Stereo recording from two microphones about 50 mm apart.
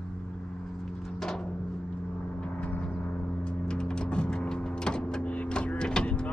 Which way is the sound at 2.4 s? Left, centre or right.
Left.